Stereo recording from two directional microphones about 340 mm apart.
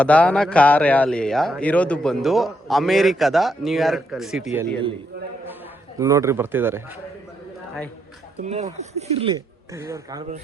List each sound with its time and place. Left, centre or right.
0.0 s speech: centre
6.0 s speech: centre
8.4 s speech: centre